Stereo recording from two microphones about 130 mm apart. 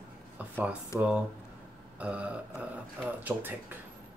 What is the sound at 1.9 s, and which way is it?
Speech, 10° right (ahead or behind).